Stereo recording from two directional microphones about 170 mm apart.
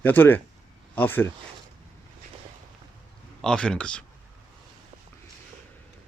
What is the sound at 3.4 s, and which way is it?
Speech, 5° left (ahead or behind).